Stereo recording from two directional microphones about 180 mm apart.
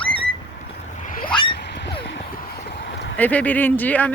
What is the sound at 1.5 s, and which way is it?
Wild animals, 70° left (ahead or behind).